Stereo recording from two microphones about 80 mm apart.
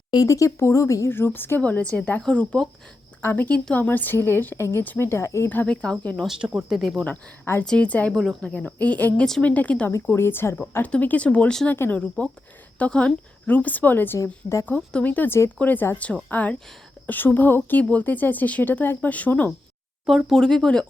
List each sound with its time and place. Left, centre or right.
0.3 s speech: left
1.1 s speech: left
5.6 s speech: centre
6.2 s speech: centre
7.6 s speech: centre
9.9 s speech: left
10.8 s speech: centre
20.1 s speech: centre